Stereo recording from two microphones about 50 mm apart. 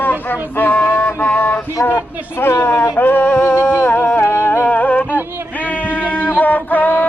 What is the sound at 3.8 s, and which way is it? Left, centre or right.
Music, left.